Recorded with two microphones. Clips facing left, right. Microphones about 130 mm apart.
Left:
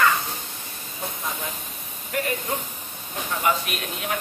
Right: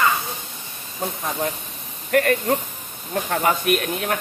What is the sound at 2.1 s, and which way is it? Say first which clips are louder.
Speech: right 8 dB; 65° right (ahead or behind).